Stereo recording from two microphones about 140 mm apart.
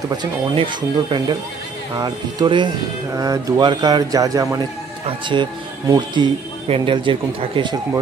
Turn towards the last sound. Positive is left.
turn(degrees=-35)  # may be behind; listen again after turning